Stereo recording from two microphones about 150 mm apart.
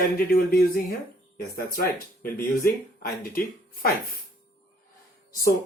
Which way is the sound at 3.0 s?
75° left (ahead or behind).